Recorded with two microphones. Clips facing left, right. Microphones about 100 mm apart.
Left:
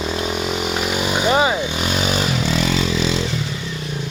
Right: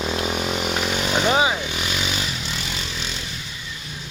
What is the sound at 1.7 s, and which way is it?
Vehicle, 35° left (ahead or behind).